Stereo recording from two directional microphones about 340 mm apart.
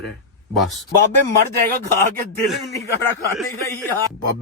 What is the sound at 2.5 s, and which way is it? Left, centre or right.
Speech, centre.